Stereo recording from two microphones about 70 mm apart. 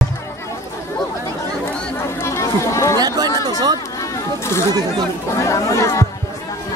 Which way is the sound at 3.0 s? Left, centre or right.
Right.